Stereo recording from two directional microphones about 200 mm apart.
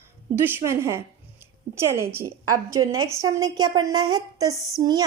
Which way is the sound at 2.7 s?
90° right.